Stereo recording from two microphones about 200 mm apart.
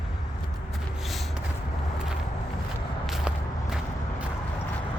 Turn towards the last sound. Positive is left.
turn(degrees=0)  # may be behind; listen again after turning